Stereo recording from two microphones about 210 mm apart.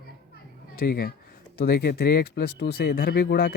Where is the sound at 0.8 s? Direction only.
45° left (ahead or behind).